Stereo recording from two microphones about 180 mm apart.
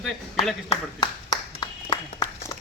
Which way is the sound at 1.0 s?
25° left (ahead or behind).